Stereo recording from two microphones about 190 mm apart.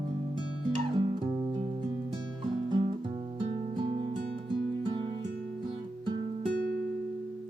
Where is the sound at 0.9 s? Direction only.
25° right (ahead or behind).